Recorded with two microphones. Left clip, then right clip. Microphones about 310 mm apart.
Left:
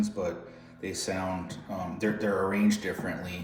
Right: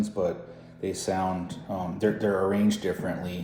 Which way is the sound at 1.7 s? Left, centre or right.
Centre.